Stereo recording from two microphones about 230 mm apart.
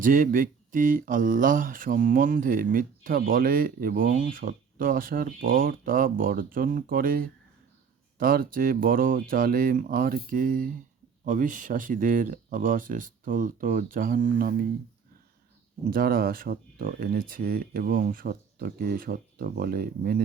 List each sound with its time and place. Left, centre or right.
0.0 s speech: right
15.9 s speech: right